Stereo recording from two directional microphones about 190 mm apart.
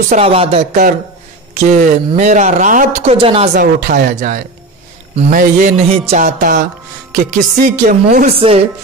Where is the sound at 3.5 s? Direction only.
45° right (ahead or behind).